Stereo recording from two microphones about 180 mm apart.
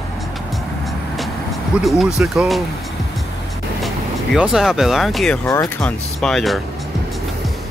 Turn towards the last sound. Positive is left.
turn(degrees=0)  # may be behind; listen again after turning